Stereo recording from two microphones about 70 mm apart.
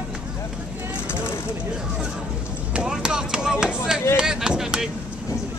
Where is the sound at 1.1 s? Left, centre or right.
Left.